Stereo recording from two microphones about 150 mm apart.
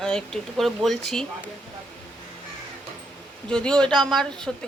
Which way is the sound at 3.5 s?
5° left (ahead or behind).